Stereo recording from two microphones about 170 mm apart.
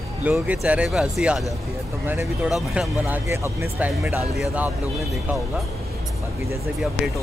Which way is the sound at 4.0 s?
5° right (ahead or behind).